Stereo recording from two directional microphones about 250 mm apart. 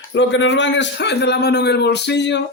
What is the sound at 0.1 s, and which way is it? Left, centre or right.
A man's voice, left.